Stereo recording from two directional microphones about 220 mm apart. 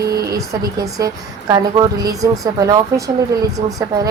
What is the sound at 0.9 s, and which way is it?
A woman's voice, 15° right (ahead or behind).